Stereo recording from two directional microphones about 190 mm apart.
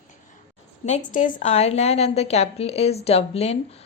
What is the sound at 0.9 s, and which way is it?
A woman's voice, 40° left (ahead or behind).